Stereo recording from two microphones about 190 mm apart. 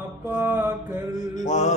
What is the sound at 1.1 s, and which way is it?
Mantra, 40° left (ahead or behind).